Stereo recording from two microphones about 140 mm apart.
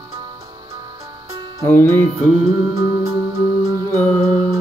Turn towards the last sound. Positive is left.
turn(degrees=-25)  # may be behind; listen again after turning